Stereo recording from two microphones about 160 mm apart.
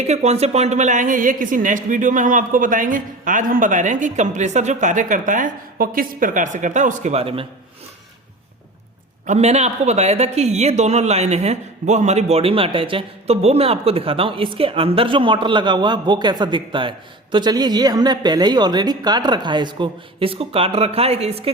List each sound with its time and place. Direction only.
0.1 s speech: 45° right (ahead or behind)
9.2 s a woman's voice: 45° right (ahead or behind)